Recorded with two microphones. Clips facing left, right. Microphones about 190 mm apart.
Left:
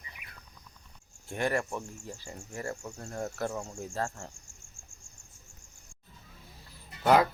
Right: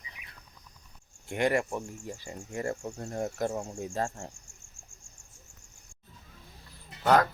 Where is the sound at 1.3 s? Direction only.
15° right (ahead or behind).